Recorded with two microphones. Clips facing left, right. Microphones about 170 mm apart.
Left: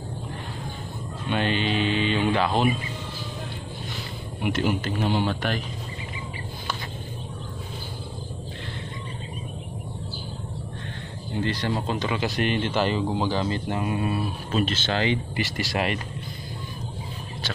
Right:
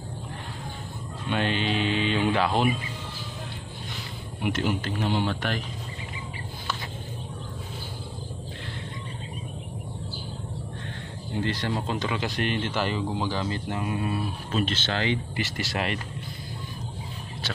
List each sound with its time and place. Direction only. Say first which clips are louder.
1.3 s speech: left 2 dB; centre (ahead or behind)
4.4 s speech: left 2 dB; 5° left (ahead or behind)
11.4 s speech: left 2 dB; centre (ahead or behind); by 13.9 s 20° left (ahead or behind)
14.5 s speech: left 2 dB; 5° left (ahead or behind)